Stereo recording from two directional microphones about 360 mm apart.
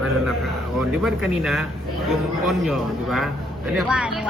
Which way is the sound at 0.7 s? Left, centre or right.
Centre.